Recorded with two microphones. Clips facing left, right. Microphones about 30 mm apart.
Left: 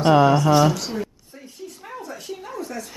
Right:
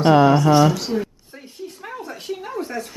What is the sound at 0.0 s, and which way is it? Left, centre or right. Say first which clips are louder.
Speech: right 2 dB; centre.